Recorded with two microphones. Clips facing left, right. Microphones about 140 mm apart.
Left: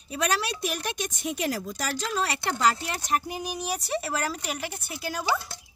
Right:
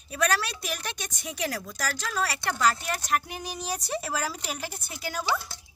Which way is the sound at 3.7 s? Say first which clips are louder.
Left 1 dB; 5° left (ahead or behind).